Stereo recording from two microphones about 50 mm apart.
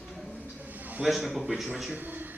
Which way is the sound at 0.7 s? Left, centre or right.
Right.